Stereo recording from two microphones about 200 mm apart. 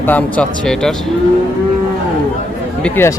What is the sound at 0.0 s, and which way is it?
Cattle, 10° left (ahead or behind).